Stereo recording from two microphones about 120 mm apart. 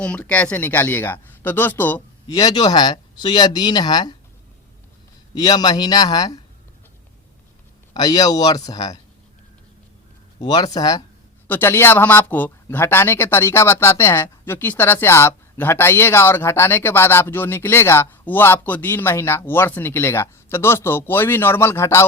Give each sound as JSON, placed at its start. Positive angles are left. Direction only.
{"t": 0.0, "sound": "speech", "side_deg": 10}
{"t": 2.2, "sound": "speech", "side_deg": 30}
{"t": 5.3, "sound": "speech", "side_deg": 35}
{"t": 7.9, "sound": "speech", "side_deg": 35}
{"t": 10.4, "sound": "speech", "side_deg": 35}
{"t": 11.4, "sound": "speech", "side_deg": 20}